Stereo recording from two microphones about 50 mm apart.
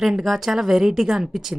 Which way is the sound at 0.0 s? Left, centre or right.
Centre.